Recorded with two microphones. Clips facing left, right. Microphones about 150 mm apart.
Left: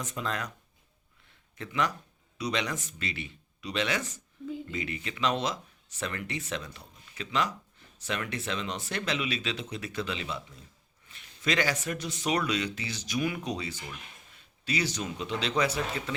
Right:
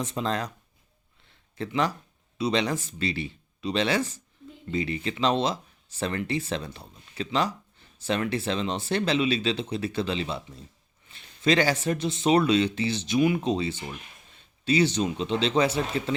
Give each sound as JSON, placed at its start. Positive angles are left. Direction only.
{"t": 0.0, "sound": "speech", "side_deg": -30}
{"t": 1.3, "sound": "a sound", "side_deg": -30}
{"t": 2.4, "sound": "speech", "side_deg": -30}